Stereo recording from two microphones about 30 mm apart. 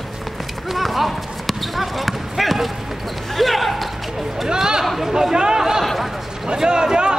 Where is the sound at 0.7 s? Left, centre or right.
Centre.